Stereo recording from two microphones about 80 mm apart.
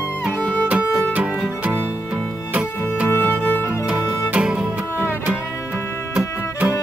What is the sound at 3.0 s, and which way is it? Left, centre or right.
Music, left.